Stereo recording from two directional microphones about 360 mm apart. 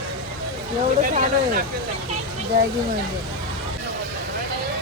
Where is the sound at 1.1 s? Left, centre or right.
Right.